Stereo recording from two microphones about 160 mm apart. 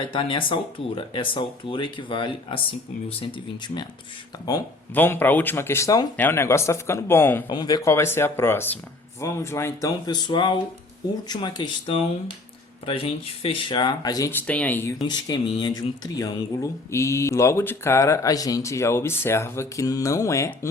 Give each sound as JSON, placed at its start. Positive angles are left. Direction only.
{"t": 0.0, "sound": "speech", "side_deg": 30}
{"t": 4.9, "sound": "speech", "side_deg": 15}
{"t": 7.4, "sound": "speech", "side_deg": 25}
{"t": 14.4, "sound": "speech", "side_deg": 10}
{"t": 15.0, "sound": "speech", "side_deg": 25}